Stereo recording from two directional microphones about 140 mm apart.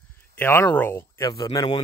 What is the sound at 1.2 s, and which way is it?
Speech, 25° left (ahead or behind).